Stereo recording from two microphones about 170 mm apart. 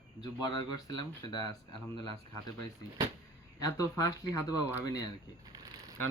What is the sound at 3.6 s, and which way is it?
Speech, 20° left (ahead or behind).